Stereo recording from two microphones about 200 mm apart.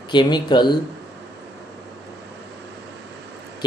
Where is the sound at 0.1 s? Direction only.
20° left (ahead or behind).